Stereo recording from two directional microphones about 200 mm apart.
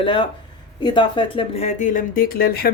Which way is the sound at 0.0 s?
25° left (ahead or behind).